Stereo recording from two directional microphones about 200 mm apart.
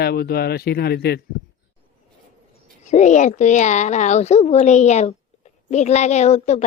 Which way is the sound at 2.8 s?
35° left (ahead or behind).